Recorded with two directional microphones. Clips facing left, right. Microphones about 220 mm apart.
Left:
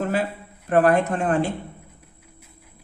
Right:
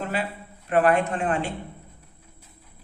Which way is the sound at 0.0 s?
45° left (ahead or behind).